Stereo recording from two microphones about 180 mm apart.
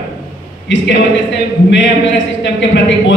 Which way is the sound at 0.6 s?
85° left.